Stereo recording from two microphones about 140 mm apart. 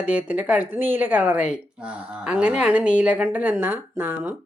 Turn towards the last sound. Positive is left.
turn(degrees=-15)  # may be behind; listen again after turning